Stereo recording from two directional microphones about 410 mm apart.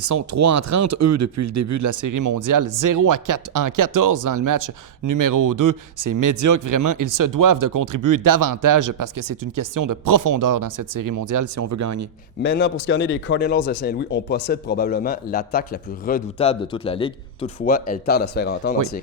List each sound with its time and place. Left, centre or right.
0.0 s speech: right
12.4 s a man's voice: left